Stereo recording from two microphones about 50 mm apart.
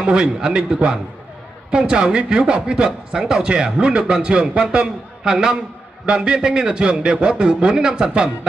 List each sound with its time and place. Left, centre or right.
0.0 s a man's voice: centre